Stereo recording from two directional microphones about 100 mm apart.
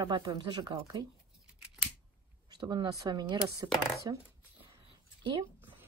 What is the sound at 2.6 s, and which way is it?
Speech, 45° right (ahead or behind).